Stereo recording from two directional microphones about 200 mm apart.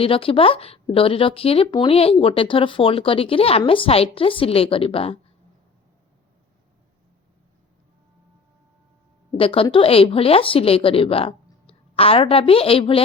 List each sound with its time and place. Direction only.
0.0 s speech: 25° left (ahead or behind)
9.4 s speech: 25° left (ahead or behind)